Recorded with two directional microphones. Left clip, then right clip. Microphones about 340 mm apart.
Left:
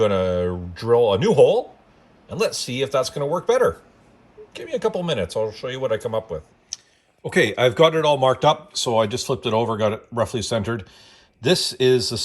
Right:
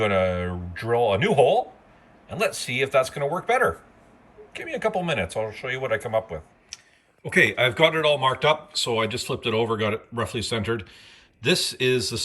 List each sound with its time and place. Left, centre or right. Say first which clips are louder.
0.0 s speech: left 3 dB; centre
10.8 s mechanisms: even; centre